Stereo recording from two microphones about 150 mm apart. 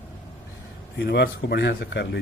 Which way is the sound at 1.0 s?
90° left.